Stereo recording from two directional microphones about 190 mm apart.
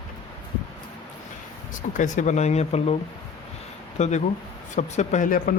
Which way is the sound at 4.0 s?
35° left (ahead or behind).